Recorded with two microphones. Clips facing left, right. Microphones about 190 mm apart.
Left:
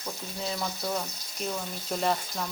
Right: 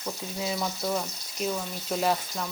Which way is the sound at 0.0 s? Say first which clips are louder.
Right 3 dB; 5° right (ahead or behind).